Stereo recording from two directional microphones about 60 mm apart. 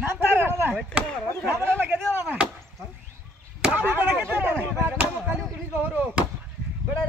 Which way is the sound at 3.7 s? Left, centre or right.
Right.